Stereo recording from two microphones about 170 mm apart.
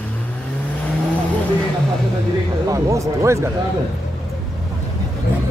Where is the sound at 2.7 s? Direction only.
20° right (ahead or behind).